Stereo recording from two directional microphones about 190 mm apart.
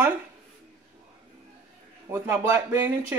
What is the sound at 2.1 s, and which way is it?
Speech, 15° right (ahead or behind).